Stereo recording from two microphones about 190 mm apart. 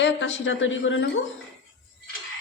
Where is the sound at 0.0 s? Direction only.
80° left.